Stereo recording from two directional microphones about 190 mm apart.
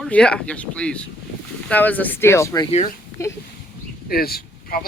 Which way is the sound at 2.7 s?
35° left (ahead or behind).